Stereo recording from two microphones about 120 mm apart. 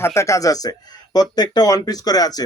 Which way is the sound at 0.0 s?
25° left (ahead or behind).